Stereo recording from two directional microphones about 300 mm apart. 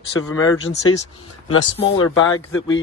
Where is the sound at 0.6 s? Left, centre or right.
Left.